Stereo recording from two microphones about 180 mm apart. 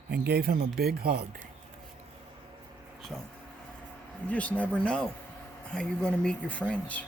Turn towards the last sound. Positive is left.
turn(degrees=5)  # may be behind; listen again after turning